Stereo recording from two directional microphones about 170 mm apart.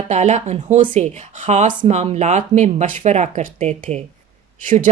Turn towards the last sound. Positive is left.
turn(degrees=-50)  # may be behind; listen again after turning